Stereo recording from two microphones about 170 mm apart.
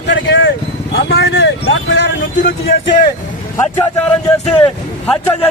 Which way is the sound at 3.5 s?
10° left (ahead or behind).